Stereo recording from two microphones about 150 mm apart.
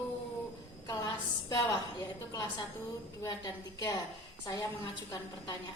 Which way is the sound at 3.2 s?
25° left (ahead or behind).